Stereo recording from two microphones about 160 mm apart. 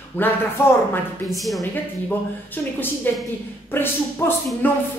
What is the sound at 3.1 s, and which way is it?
A man's voice, 10° left (ahead or behind).